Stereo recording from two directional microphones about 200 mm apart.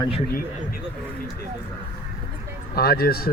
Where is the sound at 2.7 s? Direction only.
50° left (ahead or behind).